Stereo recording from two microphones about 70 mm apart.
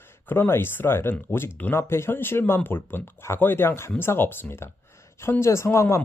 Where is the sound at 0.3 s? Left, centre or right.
Left.